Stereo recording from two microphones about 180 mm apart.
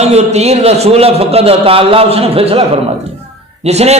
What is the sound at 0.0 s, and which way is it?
A man's voice, 35° right (ahead or behind).